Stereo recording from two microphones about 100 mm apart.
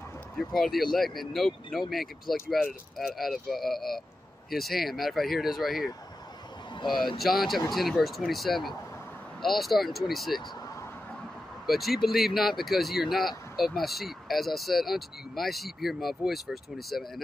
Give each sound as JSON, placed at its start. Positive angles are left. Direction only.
{"t": 0.4, "sound": "speech", "side_deg": 5}
{"t": 6.7, "sound": "a sound", "side_deg": 50}
{"t": 7.2, "sound": "speech", "side_deg": 0}
{"t": 11.6, "sound": "speech", "side_deg": 0}